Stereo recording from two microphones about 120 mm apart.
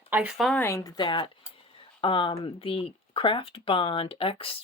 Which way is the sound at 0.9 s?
40° left (ahead or behind).